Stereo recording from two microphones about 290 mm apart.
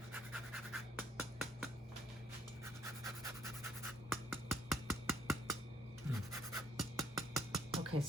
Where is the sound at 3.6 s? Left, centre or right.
Centre.